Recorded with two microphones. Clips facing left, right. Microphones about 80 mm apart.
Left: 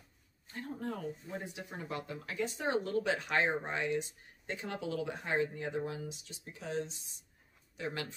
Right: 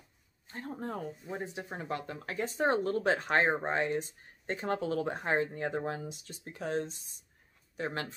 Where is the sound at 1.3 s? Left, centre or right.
Right.